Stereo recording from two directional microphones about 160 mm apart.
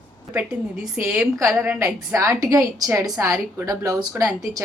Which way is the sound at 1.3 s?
20° right (ahead or behind).